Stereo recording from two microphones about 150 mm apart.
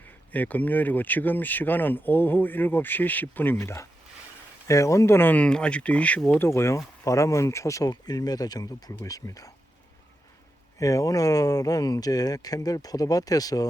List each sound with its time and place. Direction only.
0.3 s speech: 10° left (ahead or behind)
6.5 s speech: 20° left (ahead or behind)
10.8 s speech: 20° left (ahead or behind)